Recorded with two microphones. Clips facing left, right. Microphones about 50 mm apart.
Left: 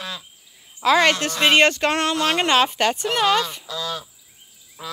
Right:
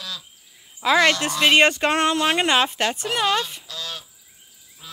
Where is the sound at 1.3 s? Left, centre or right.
Left.